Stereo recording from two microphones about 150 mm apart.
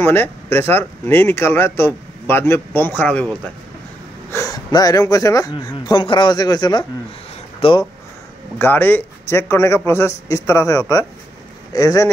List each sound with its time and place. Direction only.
0.0 s speech: 15° left (ahead or behind)
4.3 s speech: 20° left (ahead or behind)
8.5 s speech: 15° left (ahead or behind)